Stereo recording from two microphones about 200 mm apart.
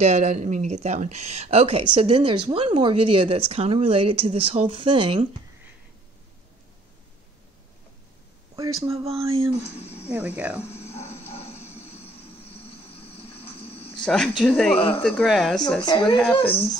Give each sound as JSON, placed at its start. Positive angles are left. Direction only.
{"t": 0.0, "sound": "speech", "side_deg": -35}
{"t": 8.8, "sound": "speech", "side_deg": -30}
{"t": 9.5, "sound": "speech", "side_deg": 30}
{"t": 10.0, "sound": "speech", "side_deg": -10}
{"t": 10.9, "sound": "music", "side_deg": 30}
{"t": 13.3, "sound": "a sound", "side_deg": 30}
{"t": 14.0, "sound": "speech", "side_deg": 5}
{"t": 15.8, "sound": "speech", "side_deg": 20}
{"t": 16.2, "sound": "speech", "side_deg": 5}